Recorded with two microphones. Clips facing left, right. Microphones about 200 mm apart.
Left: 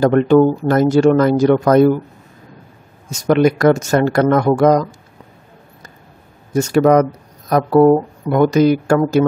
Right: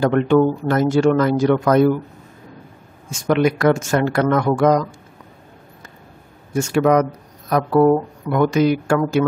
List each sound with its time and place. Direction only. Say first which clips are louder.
0.0 s speech: left 4 dB; 40° left (ahead or behind)
3.1 s speech: left 4 dB; 40° left (ahead or behind)
6.5 s speech: left 4 dB; 40° left (ahead or behind)